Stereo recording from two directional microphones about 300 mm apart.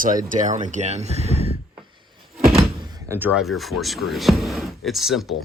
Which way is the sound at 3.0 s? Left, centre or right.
Centre.